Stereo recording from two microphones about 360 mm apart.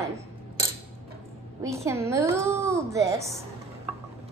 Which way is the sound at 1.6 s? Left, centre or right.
Centre.